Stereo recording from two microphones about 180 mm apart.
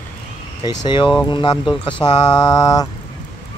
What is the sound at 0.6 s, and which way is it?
Mantra, 25° left (ahead or behind).